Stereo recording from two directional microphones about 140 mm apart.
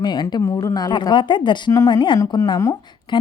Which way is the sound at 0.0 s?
30° left (ahead or behind).